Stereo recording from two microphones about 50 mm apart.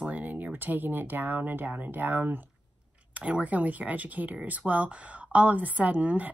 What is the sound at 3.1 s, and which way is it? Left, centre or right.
A woman's voice, right.